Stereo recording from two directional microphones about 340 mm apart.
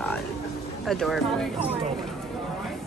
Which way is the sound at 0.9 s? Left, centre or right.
Centre.